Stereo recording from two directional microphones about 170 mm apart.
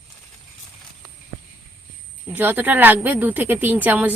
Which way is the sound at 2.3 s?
10° right (ahead or behind).